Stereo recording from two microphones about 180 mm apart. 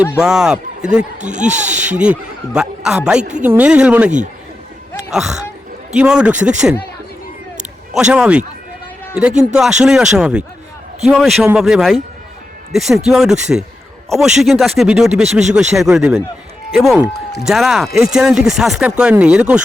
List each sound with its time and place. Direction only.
0.2 s speech: 5° right (ahead or behind)
1.2 s speech: 40° right (ahead or behind)
2.0 s speech: 5° right (ahead or behind)
4.9 s a sound: 5° right (ahead or behind)
5.9 s speech: 5° right (ahead or behind)
7.9 s speech: 5° right (ahead or behind)